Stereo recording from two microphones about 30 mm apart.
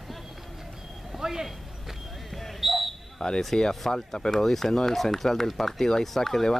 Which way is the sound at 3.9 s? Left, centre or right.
Centre.